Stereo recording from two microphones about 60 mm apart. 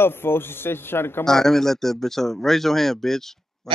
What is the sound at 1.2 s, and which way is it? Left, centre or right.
Speech, centre.